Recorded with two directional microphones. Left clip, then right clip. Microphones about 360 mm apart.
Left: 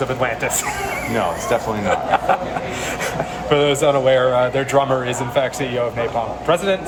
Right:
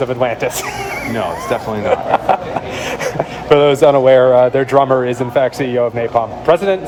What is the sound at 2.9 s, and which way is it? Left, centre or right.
A man's voice, centre.